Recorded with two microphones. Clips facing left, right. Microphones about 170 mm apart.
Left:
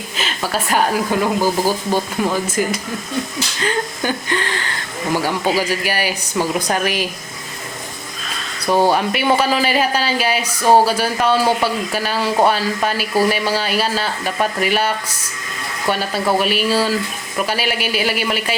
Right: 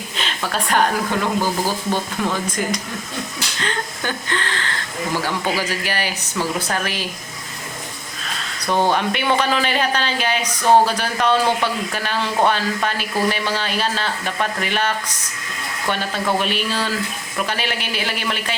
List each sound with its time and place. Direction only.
0.2 s a sound: 5° left (ahead or behind)
1.2 s speech: 10° left (ahead or behind)
8.6 s speech: 5° left (ahead or behind)